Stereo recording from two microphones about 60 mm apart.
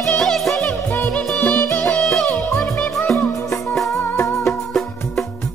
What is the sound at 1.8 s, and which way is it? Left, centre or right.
Music, centre.